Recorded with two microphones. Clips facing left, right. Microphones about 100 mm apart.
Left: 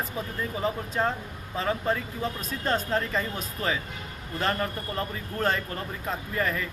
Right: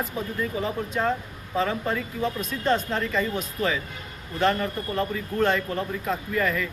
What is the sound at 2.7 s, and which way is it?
Speech, 35° left (ahead or behind).